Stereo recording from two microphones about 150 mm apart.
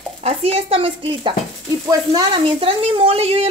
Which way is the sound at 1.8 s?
25° right (ahead or behind).